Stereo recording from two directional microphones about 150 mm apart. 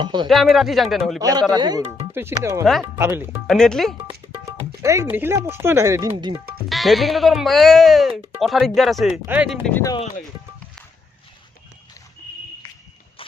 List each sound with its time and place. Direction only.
0.0 s speech: 30° right (ahead or behind)
0.3 s speech: centre (ahead or behind)
1.2 s speech: 25° right (ahead or behind)
3.4 s speech: centre (ahead or behind)
4.0 s speech: 20° right (ahead or behind)
6.7 s speech: centre (ahead or behind)
9.2 s speech: 10° right (ahead or behind)